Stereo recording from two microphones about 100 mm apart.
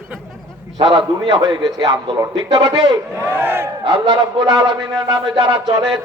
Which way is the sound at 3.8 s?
55° right (ahead or behind).